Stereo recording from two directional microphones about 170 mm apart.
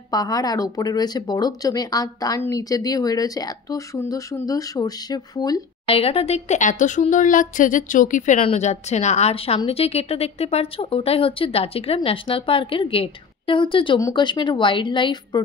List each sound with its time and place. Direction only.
0.1 s speech: 20° left (ahead or behind)
5.9 s a woman's voice: 35° left (ahead or behind)